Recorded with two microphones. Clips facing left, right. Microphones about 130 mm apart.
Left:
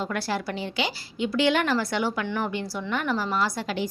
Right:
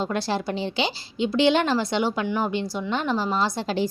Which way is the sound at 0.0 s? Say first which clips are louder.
Right 3 dB; 25° right (ahead or behind).